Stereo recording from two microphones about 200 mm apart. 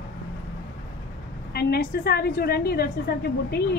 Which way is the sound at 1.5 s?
50° left (ahead or behind).